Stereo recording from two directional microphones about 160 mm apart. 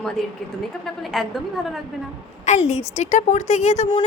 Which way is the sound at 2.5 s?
45° left (ahead or behind).